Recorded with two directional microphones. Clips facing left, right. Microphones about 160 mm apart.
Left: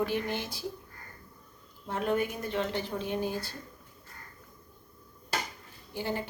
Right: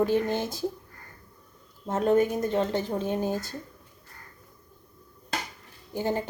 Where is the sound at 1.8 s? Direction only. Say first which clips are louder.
Right 7 dB; 45° right (ahead or behind).